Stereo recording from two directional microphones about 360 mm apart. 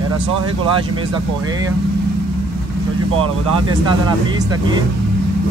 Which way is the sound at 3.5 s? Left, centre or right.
Centre.